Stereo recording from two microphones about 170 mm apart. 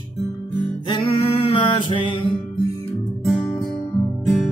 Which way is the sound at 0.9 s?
30° left (ahead or behind).